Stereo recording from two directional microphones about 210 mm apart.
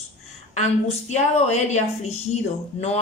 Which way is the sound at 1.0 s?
30° left (ahead or behind).